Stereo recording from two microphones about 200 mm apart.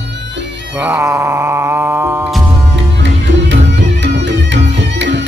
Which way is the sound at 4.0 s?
65° right (ahead or behind).